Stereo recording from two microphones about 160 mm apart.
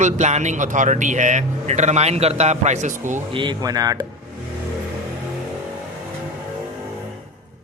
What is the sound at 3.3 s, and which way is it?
Speech, 30° right (ahead or behind).